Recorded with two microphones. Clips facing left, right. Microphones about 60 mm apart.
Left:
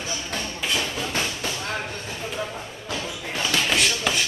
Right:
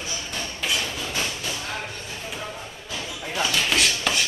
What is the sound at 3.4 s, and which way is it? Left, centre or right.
Chopping, centre.